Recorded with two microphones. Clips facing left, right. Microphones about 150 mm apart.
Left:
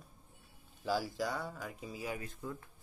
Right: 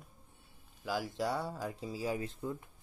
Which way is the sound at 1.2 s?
30° right (ahead or behind).